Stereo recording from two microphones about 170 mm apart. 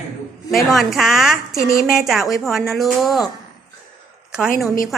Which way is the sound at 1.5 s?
15° left (ahead or behind).